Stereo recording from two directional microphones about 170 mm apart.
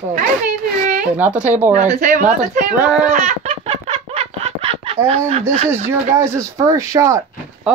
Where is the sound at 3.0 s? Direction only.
40° right (ahead or behind).